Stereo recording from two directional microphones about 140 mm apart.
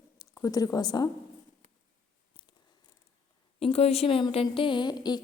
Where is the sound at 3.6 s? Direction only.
45° left (ahead or behind); by 5.2 s 30° left (ahead or behind).